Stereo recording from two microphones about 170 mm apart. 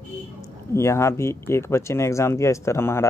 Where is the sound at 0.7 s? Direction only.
15° left (ahead or behind).